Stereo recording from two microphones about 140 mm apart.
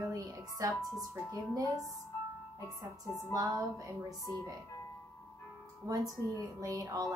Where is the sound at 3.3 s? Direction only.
25° right (ahead or behind).